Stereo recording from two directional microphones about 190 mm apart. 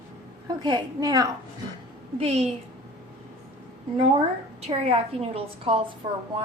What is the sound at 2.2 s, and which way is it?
Speech, 30° right (ahead or behind).